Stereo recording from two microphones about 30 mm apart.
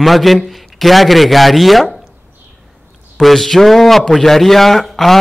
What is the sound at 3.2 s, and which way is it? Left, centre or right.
A man's voice, centre.